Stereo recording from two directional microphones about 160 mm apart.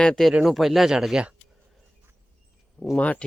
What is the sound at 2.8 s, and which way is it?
Speech, 5° left (ahead or behind).